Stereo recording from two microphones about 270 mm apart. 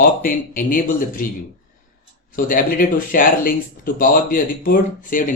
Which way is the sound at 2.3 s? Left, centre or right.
Left.